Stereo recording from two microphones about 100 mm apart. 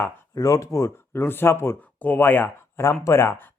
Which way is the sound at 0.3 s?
35° left (ahead or behind).